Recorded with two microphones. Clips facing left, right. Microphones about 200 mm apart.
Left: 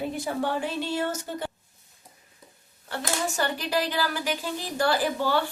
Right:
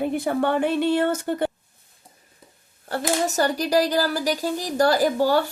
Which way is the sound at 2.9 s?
40° right (ahead or behind).